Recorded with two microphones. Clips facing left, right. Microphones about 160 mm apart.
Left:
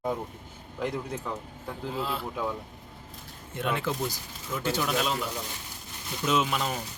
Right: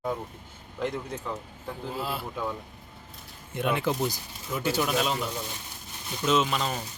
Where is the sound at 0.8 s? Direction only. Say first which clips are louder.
Even; 5° left (ahead or behind).